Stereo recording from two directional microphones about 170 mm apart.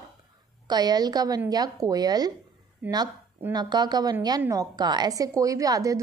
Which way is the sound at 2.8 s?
10° right (ahead or behind).